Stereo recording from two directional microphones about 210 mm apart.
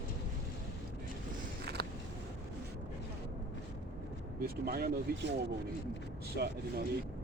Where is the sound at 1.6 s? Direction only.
50° right (ahead or behind).